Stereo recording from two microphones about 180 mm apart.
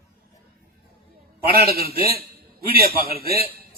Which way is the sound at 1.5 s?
60° right (ahead or behind).